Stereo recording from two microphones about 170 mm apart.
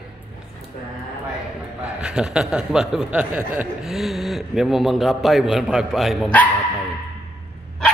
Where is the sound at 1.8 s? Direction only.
5° right (ahead or behind).